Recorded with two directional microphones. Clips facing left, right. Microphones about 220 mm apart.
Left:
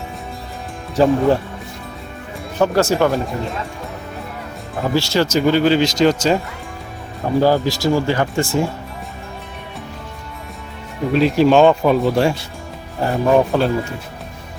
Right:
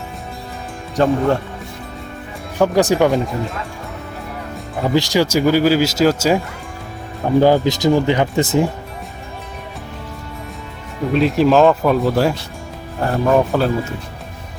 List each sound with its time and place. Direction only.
0.9 s speech: centre (ahead or behind)
2.6 s speech: 15° right (ahead or behind)
4.9 s speech: 15° right (ahead or behind)
7.4 s speech: 20° right (ahead or behind)
11.1 s speech: centre (ahead or behind)